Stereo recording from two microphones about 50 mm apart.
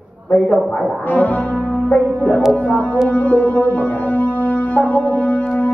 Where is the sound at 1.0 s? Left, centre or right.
Left.